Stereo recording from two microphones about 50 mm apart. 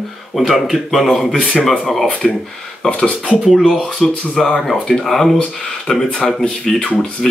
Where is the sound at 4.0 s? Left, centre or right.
Centre.